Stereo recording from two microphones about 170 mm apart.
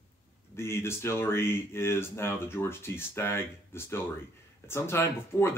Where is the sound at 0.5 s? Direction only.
15° left (ahead or behind).